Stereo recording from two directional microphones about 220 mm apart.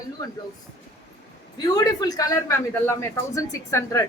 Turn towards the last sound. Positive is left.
turn(degrees=15)  # may be behind; listen again after turning